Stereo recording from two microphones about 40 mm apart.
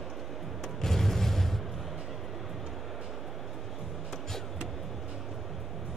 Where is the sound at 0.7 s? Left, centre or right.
Centre.